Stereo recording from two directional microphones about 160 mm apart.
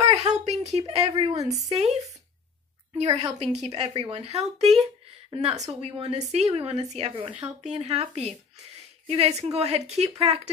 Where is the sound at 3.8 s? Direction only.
40° right (ahead or behind).